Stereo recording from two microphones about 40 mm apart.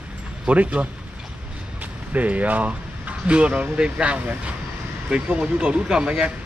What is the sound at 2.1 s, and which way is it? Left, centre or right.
Speech, right.